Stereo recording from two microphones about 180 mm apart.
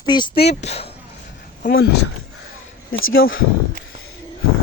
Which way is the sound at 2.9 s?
90° left.